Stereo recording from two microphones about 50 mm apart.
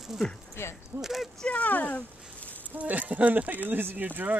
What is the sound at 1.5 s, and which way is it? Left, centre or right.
Speech, left.